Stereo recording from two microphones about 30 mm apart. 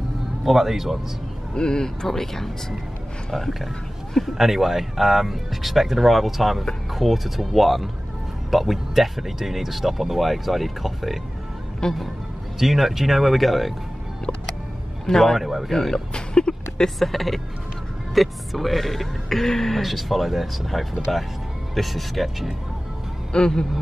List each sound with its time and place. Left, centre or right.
0.4 s speech: centre
1.5 s speech: left
2.0 s speech: centre
4.2 s speech: centre
11.8 s speech: left
12.5 s speech: centre
15.0 s speech: centre
15.3 s speech: centre
15.7 s speech: centre
16.1 s a sound: left
17.0 s speech: centre
19.8 s speech: centre
23.3 s speech: left